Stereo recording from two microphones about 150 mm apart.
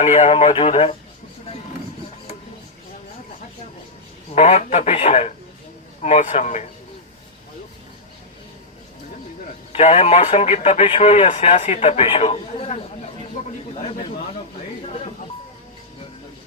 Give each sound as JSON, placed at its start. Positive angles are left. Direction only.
{"t": 0.0, "sound": "speech", "side_deg": 50}
{"t": 4.4, "sound": "speech", "side_deg": 50}
{"t": 9.4, "sound": "speech", "side_deg": 50}